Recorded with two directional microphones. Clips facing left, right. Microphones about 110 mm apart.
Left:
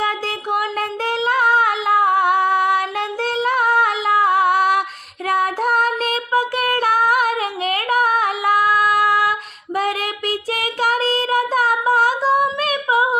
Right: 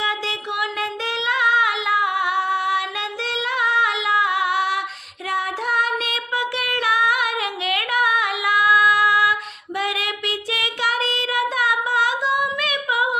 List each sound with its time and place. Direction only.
0.5 s female singing: 45° left (ahead or behind)
5.3 s music: 50° left (ahead or behind)
9.7 s child singing: 45° left (ahead or behind)